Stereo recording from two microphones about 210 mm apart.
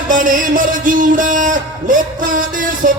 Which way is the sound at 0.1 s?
40° right (ahead or behind).